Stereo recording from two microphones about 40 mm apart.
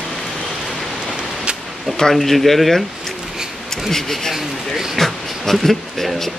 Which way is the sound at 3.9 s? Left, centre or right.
Centre.